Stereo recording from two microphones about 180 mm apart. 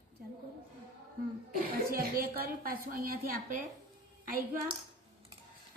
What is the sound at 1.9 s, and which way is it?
A woman's voice, 55° right (ahead or behind).